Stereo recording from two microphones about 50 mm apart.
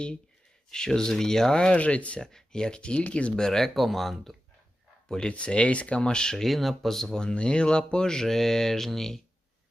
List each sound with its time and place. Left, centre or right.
0.7 s speech: centre
1.8 s speech: left
2.2 s speech: centre
3.4 s speech: centre
5.0 s speech: centre